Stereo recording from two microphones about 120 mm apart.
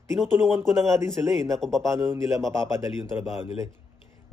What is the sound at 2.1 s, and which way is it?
Speech, 25° right (ahead or behind).